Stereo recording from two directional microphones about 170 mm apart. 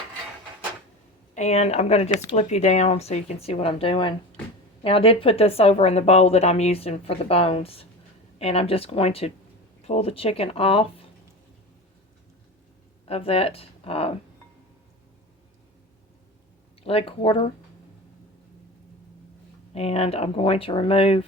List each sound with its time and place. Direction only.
1.4 s speech: 40° left (ahead or behind)
13.1 s speech: 35° left (ahead or behind)
16.8 s speech: 35° left (ahead or behind)
19.7 s speech: 35° left (ahead or behind)